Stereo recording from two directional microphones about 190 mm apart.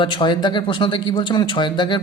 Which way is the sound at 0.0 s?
25° left (ahead or behind).